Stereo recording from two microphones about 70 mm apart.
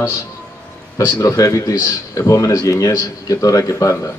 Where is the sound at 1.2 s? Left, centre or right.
Left.